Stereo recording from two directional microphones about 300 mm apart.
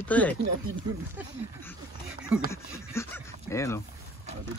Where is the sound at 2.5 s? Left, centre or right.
Centre.